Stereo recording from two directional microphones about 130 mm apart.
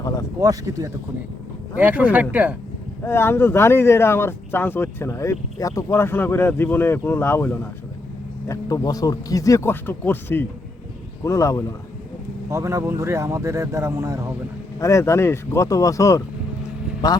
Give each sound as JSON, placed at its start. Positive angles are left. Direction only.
{"t": 0.3, "sound": "speech", "side_deg": -25}
{"t": 1.8, "sound": "speech", "side_deg": -10}
{"t": 3.0, "sound": "speech", "side_deg": 20}
{"t": 8.4, "sound": "speech", "side_deg": 30}
{"t": 12.5, "sound": "speech", "side_deg": -20}
{"t": 14.8, "sound": "speech", "side_deg": 25}